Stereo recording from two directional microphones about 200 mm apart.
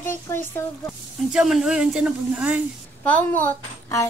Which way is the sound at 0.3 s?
15° left (ahead or behind).